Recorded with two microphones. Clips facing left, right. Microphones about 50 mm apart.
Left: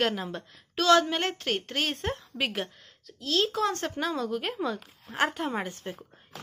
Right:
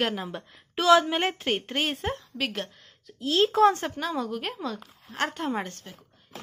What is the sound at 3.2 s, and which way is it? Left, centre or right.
Speech, right.